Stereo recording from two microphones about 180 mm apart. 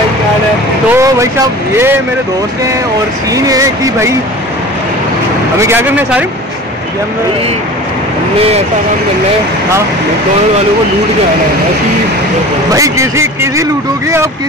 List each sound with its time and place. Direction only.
0.9 s speech: 20° right (ahead or behind)
3.3 s speech: 20° right (ahead or behind)
5.6 s speech: 10° right (ahead or behind)
12.7 s speech: 20° right (ahead or behind)